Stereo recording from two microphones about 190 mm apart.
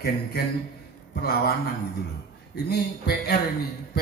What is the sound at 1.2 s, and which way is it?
Speech, 55° left (ahead or behind).